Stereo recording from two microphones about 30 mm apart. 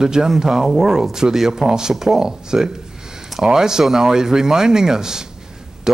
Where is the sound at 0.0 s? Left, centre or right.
Right.